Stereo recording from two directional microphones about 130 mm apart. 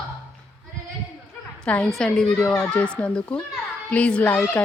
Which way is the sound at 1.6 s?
5° left (ahead or behind).